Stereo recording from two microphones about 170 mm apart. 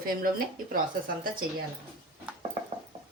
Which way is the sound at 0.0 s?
55° right (ahead or behind).